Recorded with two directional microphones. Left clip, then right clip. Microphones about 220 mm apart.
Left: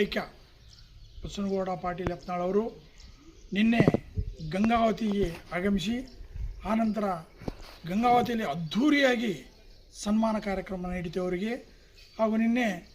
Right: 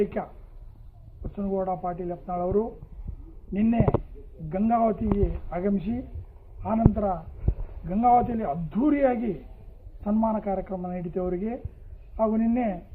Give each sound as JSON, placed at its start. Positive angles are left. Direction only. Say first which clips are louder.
{"t": 0.0, "sound": "speech", "louder": "right 2 dB", "side_deg": 20}
{"t": 1.4, "sound": "a man's voice", "louder": "right 3 dB", "side_deg": 20}